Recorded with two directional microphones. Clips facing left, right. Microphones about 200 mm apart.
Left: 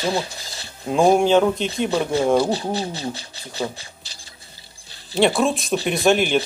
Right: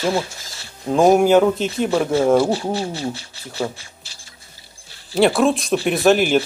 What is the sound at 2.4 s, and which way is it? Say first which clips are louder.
Speech: right 2 dB; 20° left (ahead or behind).